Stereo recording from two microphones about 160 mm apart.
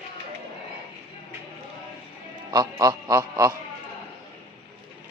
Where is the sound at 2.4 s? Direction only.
20° right (ahead or behind).